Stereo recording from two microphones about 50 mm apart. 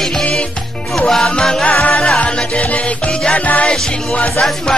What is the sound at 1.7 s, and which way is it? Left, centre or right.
Music, left.